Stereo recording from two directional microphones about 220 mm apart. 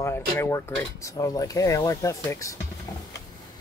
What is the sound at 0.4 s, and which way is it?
Mechanisms, 10° left (ahead or behind).